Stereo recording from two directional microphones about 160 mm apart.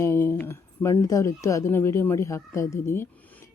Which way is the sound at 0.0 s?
15° left (ahead or behind).